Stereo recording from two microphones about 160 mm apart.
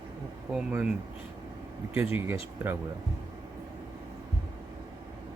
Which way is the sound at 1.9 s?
15° right (ahead or behind).